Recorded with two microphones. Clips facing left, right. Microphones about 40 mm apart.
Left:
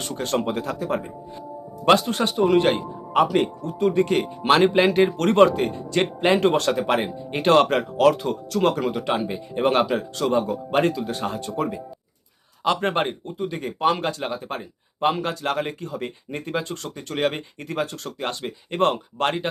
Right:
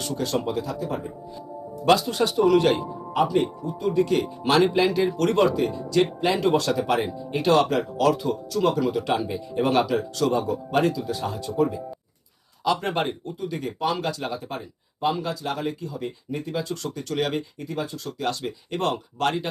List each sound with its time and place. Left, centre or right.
0.1 s speech: left
1.8 s speech: left
3.1 s speech: left
8.9 s speech: left
17.6 s speech: left
18.2 s speech: left